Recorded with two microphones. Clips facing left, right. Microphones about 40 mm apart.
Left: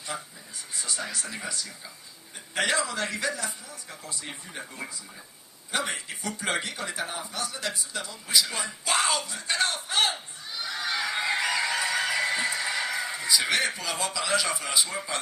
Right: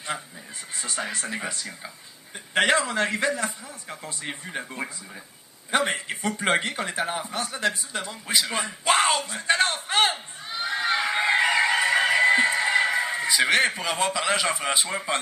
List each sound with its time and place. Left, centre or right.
0.1 s a man's voice: right